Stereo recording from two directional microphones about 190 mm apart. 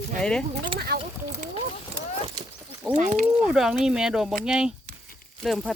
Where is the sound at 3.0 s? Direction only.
40° right (ahead or behind).